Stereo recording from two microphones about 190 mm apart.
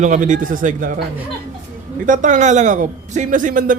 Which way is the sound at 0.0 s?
40° right (ahead or behind).